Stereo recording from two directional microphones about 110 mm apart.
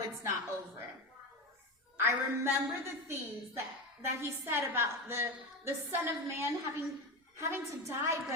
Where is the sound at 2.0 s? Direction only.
25° right (ahead or behind).